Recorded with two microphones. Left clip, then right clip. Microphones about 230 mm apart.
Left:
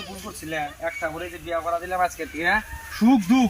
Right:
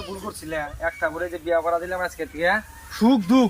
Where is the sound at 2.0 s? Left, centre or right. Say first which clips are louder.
Right 1 dB; centre.